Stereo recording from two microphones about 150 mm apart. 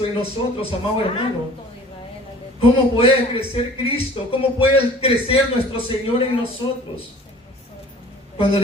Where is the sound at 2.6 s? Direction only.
40° left (ahead or behind).